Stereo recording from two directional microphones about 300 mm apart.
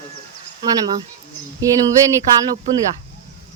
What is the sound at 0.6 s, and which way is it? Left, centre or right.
Speech, centre.